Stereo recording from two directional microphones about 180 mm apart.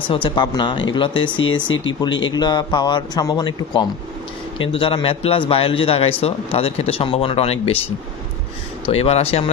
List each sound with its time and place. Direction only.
0.1 s a man's voice: 25° left (ahead or behind)
8.8 s a man's voice: 35° left (ahead or behind)